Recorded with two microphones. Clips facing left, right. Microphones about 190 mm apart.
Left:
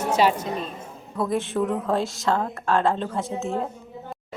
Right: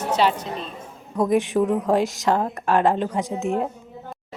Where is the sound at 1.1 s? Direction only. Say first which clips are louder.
Right 5 dB; 15° right (ahead or behind).